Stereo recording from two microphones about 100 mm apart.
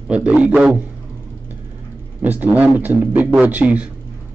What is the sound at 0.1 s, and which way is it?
Speech, 10° right (ahead or behind).